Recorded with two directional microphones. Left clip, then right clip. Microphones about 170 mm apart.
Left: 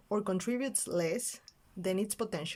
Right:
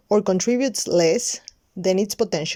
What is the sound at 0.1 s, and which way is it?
Speech, 40° right (ahead or behind).